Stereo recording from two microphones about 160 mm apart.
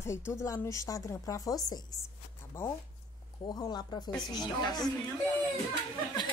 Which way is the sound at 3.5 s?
25° left (ahead or behind).